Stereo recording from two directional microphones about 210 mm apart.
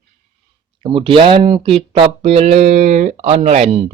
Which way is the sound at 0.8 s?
25° right (ahead or behind).